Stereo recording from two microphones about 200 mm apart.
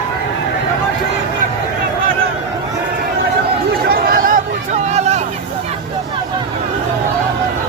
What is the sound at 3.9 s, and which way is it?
Chatter, 45° right (ahead or behind).